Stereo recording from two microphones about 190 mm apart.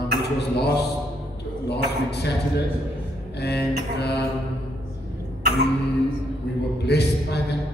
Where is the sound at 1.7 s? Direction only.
60° left (ahead or behind).